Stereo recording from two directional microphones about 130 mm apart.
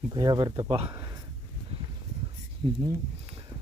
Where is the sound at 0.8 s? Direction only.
20° right (ahead or behind).